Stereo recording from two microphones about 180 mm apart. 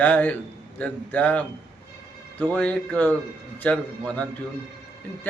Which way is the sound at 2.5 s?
10° left (ahead or behind).